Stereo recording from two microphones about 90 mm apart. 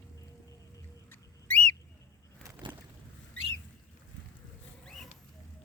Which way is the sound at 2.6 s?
65° right (ahead or behind).